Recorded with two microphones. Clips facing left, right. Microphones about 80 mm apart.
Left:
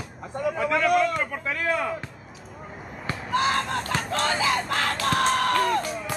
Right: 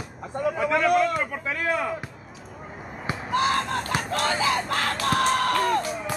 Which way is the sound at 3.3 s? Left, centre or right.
Right.